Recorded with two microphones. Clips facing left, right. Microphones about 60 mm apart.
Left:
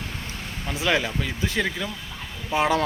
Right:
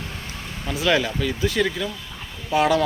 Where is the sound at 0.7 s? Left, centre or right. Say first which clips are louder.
Right 3 dB; left.